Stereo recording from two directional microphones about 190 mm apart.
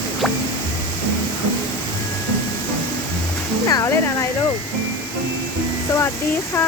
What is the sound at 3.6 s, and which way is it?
Music, 15° left (ahead or behind).